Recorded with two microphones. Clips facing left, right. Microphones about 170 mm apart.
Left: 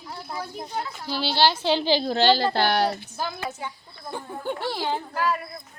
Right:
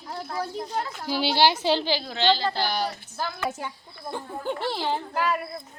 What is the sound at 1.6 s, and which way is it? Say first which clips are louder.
Speech: even; 5° right (ahead or behind).